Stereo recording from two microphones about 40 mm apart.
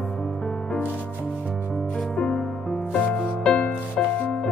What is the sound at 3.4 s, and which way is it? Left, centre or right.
Music, left.